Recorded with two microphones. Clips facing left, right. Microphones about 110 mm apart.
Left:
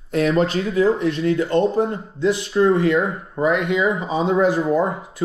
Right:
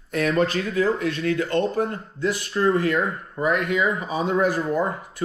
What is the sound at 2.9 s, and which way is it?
Speech, 10° left (ahead or behind).